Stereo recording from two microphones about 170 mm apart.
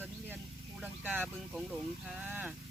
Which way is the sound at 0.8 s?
10° right (ahead or behind).